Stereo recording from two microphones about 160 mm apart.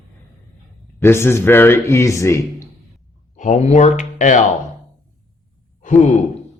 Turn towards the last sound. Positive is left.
turn(degrees=50)  # may be behind; listen again after turning